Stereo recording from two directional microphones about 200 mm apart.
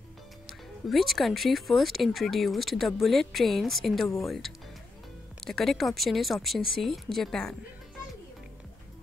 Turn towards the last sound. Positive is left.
turn(degrees=0)  # may be behind; listen again after turning